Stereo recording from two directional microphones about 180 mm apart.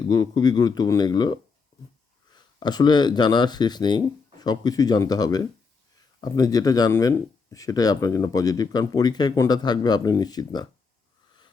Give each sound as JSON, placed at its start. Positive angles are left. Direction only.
{"t": 0.1, "sound": "speech", "side_deg": 20}